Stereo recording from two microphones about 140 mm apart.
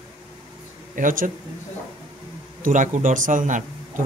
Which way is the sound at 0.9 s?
75° right (ahead or behind).